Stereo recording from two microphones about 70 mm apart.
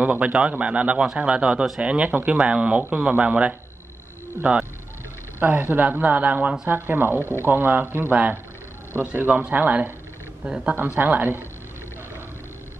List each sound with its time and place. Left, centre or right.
0.0 s speech: centre